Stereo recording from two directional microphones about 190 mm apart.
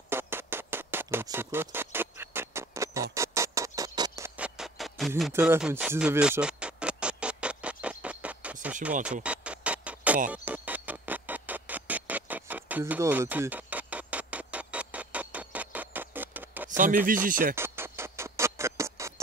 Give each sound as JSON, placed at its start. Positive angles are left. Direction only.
{"t": 0.1, "sound": "music", "side_deg": -10}
{"t": 4.6, "sound": "music", "side_deg": 0}
{"t": 5.3, "sound": "music", "side_deg": -10}
{"t": 16.7, "sound": "speech", "side_deg": -45}
{"t": 17.6, "sound": "music", "side_deg": -15}